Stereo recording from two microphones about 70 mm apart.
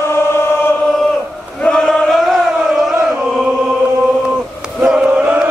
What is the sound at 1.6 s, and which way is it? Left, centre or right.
Chant, centre.